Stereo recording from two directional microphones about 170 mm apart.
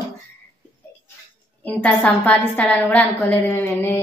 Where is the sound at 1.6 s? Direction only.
5° left (ahead or behind).